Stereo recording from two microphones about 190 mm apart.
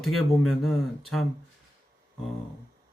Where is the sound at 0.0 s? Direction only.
Centre (ahead or behind).